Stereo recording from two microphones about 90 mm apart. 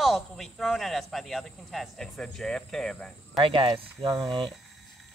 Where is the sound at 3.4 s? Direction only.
90° right.